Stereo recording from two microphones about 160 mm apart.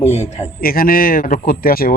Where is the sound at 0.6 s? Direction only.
65° left (ahead or behind).